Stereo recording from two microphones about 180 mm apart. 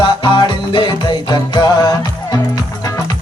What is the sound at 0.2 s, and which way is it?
Music, 25° left (ahead or behind).